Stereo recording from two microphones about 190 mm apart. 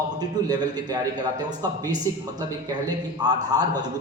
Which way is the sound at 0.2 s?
20° right (ahead or behind).